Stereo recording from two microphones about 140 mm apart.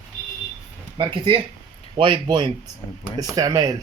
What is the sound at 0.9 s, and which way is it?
Speech, 40° right (ahead or behind).